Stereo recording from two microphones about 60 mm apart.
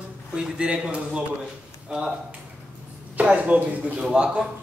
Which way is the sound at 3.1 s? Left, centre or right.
Right.